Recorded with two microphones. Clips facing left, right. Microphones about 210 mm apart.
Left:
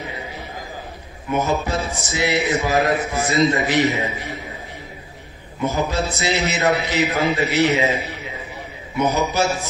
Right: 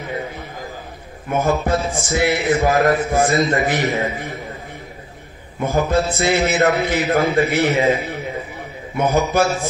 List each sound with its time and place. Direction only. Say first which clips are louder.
1.3 s a man's voice: right 3 dB; 55° right (ahead or behind)
5.7 s a man's voice: right 5 dB; 50° right (ahead or behind)